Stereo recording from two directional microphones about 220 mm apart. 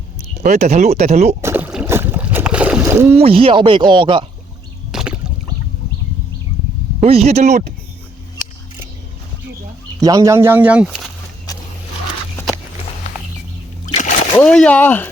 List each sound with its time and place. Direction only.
0.4 s speech: 30° right (ahead or behind)
1.4 s boat: 10° right (ahead or behind)
3.2 s speech: 25° right (ahead or behind)
4.9 s a sound: centre (ahead or behind)
7.0 s speech: 30° right (ahead or behind)
10.0 s speech: 15° right (ahead or behind)
13.8 s splash: 35° left (ahead or behind)
14.3 s speech: 5° left (ahead or behind)